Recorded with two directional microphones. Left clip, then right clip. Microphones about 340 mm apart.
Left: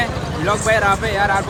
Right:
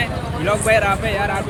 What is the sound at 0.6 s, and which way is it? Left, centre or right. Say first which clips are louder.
Speech: left 1 dB; centre.